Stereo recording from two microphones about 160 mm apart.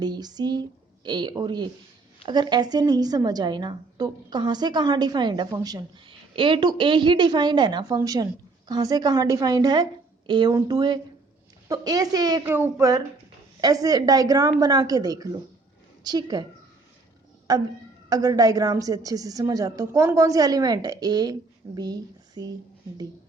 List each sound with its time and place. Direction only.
0.0 s a woman's voice: 25° right (ahead or behind)
12.5 s a woman's voice: 15° right (ahead or behind)
17.5 s a woman's voice: 25° right (ahead or behind)